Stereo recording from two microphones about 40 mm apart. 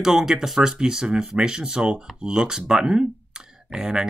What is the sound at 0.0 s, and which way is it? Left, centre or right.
Speech, centre.